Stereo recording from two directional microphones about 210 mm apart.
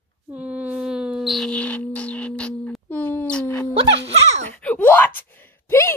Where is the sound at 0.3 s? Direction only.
5° right (ahead or behind); by 3.6 s 10° left (ahead or behind).